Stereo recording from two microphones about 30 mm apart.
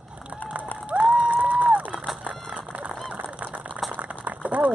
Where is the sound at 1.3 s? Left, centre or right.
Right.